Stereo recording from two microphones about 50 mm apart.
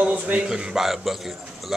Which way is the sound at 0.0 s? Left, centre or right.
Right.